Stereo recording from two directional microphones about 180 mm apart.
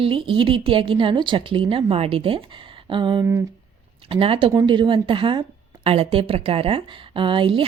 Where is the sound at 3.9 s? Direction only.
30° right (ahead or behind).